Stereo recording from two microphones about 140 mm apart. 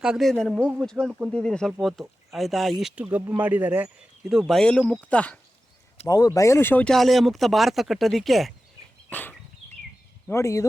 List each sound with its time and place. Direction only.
0.0 s speech: centre (ahead or behind)
4.3 s speech: centre (ahead or behind)
6.1 s speech: 25° left (ahead or behind)
6.9 s speech: centre (ahead or behind)
9.0 s a sound: 10° left (ahead or behind)
10.2 s speech: 20° left (ahead or behind)